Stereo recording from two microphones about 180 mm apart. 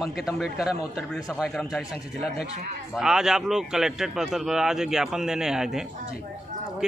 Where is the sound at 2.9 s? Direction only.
5° right (ahead or behind).